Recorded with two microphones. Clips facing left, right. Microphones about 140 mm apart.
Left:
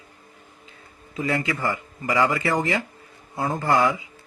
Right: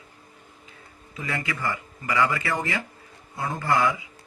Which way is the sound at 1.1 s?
35° left (ahead or behind).